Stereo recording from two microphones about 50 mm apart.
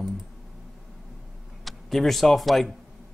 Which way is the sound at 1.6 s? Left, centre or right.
Centre.